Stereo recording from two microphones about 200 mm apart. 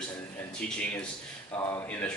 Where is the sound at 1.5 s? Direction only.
15° left (ahead or behind).